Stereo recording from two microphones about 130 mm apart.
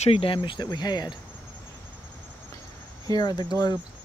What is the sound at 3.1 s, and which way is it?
Speech, 30° left (ahead or behind).